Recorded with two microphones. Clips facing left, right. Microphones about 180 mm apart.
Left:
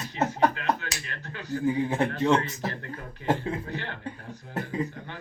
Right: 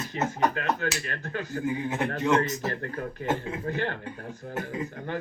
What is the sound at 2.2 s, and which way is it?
Speech, 30° left (ahead or behind).